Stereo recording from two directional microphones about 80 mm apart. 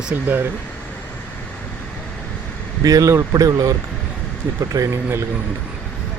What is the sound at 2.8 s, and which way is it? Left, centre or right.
Speech, right.